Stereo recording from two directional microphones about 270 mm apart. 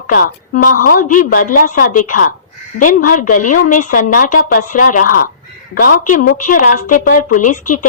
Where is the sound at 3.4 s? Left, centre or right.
Left.